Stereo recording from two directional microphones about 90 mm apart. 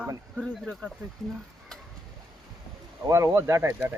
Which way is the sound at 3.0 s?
35° right (ahead or behind).